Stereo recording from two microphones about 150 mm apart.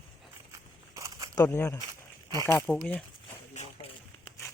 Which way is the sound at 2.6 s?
5° left (ahead or behind).